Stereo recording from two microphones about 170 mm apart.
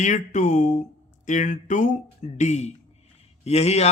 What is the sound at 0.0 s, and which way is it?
Speech, 45° left (ahead or behind).